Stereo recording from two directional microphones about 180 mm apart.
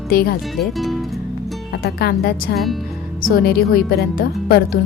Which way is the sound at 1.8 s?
60° left (ahead or behind).